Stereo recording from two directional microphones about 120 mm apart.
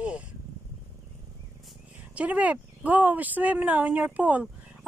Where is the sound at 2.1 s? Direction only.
10° right (ahead or behind).